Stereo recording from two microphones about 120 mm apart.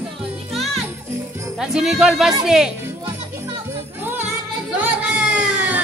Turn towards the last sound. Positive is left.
turn(degrees=-10)  # may be behind; listen again after turning